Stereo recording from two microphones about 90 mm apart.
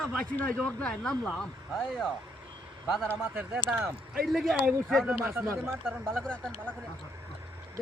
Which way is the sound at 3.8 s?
Centre (ahead or behind).